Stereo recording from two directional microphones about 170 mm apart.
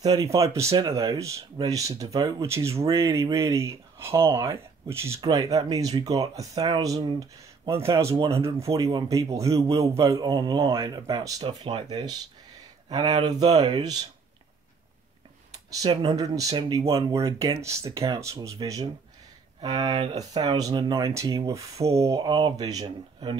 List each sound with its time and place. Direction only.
0.0 s speech: 20° right (ahead or behind)
15.8 s speech: 25° right (ahead or behind)